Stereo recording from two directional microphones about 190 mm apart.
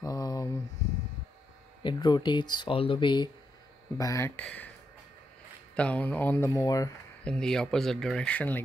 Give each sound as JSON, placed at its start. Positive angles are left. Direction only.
{"t": 0.0, "sound": "a sound", "side_deg": 20}
{"t": 1.8, "sound": "speech", "side_deg": 25}
{"t": 5.8, "sound": "speech", "side_deg": 5}
{"t": 7.2, "sound": "speech", "side_deg": 5}